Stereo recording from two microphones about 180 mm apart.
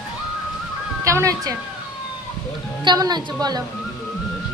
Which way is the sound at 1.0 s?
15° right (ahead or behind).